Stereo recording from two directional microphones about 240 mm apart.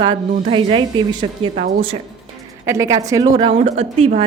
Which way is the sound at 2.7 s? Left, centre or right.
Centre.